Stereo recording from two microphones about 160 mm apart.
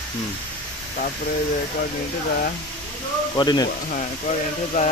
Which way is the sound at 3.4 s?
25° left (ahead or behind).